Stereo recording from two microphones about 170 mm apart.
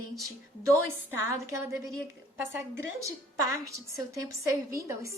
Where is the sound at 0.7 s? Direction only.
15° right (ahead or behind).